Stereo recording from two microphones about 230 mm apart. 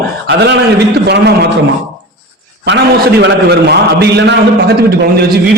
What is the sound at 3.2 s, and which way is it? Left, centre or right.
A man's voice, right.